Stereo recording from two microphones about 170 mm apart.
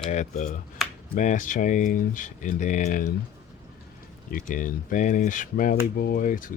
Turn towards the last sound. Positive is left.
turn(degrees=50)  # may be behind; listen again after turning